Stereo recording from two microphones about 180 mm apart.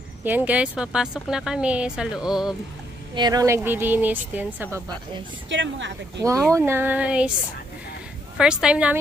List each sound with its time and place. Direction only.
0.2 s speech: 10° right (ahead or behind)
3.2 s speech: 20° right (ahead or behind)
5.5 s speech: 90° right
6.2 s speech: 15° right (ahead or behind)
8.4 s speech: 5° right (ahead or behind)